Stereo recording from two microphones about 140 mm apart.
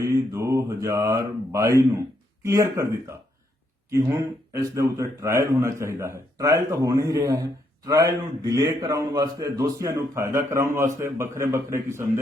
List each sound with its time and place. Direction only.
0.0 s a man's voice: 20° right (ahead or behind)